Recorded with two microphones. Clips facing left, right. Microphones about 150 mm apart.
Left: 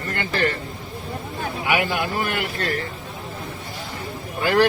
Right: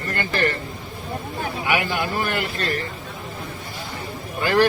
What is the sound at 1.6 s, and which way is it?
Speech, 15° left (ahead or behind).